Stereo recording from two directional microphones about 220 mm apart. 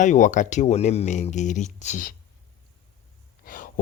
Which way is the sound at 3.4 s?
40° left (ahead or behind).